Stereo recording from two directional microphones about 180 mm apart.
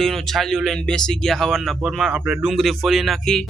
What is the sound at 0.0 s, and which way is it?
Speech, centre (ahead or behind).